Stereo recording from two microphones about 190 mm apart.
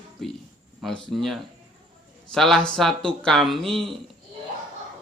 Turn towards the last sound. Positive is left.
turn(degrees=0)  # may be behind; listen again after turning